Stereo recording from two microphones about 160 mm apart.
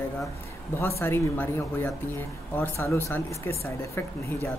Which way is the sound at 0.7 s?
15° left (ahead or behind).